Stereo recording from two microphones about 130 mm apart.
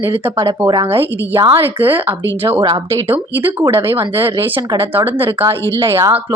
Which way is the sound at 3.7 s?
20° right (ahead or behind).